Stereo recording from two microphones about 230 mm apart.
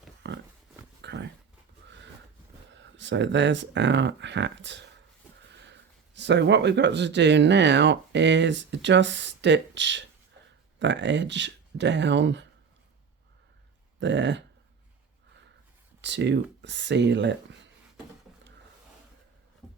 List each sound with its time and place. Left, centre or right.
0.2 s a sound: right
2.8 s speech: right
6.1 s speech: right
14.0 s speech: right
16.0 s speech: right